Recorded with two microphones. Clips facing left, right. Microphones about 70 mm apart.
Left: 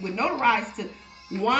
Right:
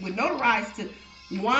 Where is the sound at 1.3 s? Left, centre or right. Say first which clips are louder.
Left 2 dB; left.